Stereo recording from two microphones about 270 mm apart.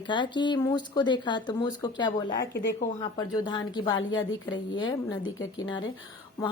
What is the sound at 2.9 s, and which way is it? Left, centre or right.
Speech, centre.